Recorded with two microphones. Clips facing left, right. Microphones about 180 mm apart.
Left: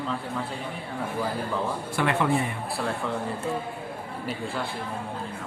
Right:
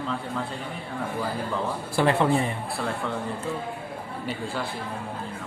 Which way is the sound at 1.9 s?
30° right (ahead or behind).